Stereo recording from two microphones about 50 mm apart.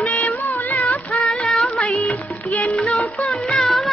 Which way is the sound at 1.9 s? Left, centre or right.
Left.